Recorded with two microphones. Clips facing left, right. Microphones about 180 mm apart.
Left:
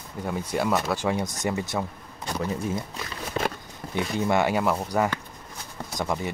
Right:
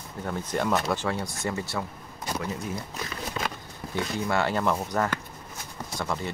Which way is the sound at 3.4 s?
30° left (ahead or behind).